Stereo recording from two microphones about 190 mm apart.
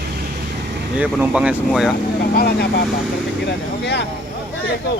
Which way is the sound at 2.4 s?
55° left (ahead or behind).